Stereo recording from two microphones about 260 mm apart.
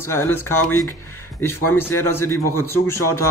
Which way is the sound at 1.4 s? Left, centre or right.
Centre.